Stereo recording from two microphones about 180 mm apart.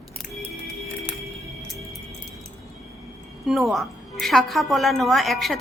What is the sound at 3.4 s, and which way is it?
A woman's voice, centre (ahead or behind).